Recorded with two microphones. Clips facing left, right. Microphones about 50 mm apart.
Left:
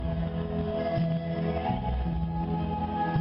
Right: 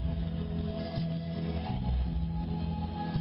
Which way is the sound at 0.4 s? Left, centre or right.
Left.